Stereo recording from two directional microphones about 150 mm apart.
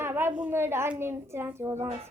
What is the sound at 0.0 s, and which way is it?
A woman's voice, 15° right (ahead or behind).